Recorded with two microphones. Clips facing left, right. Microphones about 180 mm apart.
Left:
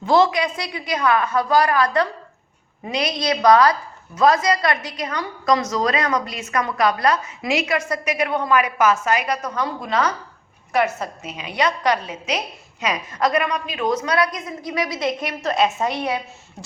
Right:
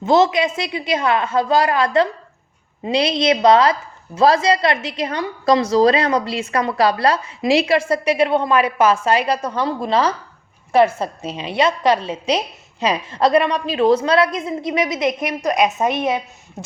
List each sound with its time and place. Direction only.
0.0 s a woman's voice: 20° right (ahead or behind)